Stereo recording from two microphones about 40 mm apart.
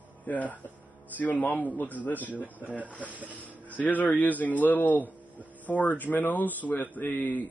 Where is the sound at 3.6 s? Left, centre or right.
Left.